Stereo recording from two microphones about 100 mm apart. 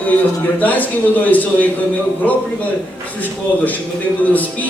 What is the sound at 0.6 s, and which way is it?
A man's voice, 15° left (ahead or behind).